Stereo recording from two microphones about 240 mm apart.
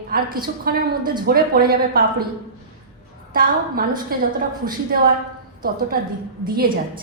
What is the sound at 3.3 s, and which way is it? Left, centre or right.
A woman's voice, right.